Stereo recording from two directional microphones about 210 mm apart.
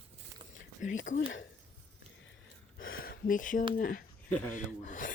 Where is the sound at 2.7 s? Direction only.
70° left (ahead or behind).